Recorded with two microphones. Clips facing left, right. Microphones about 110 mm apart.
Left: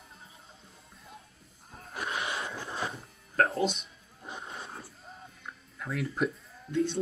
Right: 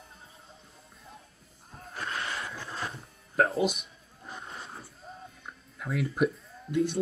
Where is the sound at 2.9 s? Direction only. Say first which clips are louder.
Left 1 dB; centre (ahead or behind).